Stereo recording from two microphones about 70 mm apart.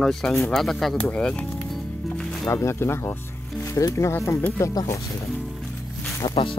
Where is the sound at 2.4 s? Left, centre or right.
Left.